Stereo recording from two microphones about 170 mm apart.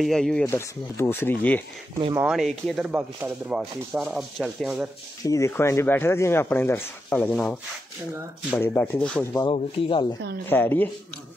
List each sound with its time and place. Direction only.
0.0 s sanding: centre (ahead or behind)
0.5 s speech: 15° left (ahead or behind)
2.1 s sanding: 5° right (ahead or behind)
2.9 s sanding: 10° right (ahead or behind)
5.2 s speech: 20° left (ahead or behind)
9.5 s speech: 30° left (ahead or behind)
10.4 s speech: 10° left (ahead or behind)